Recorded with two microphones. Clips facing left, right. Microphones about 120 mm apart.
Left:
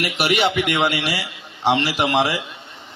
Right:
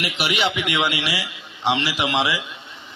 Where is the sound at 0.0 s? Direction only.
50° left (ahead or behind).